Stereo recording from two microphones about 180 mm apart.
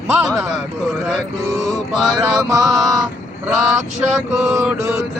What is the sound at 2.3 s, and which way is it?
Speech, 15° right (ahead or behind).